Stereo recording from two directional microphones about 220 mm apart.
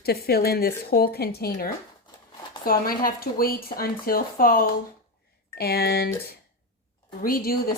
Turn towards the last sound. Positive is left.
turn(degrees=40)  # may be behind; listen again after turning